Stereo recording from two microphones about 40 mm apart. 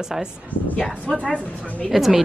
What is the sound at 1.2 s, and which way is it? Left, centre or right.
Speech, left.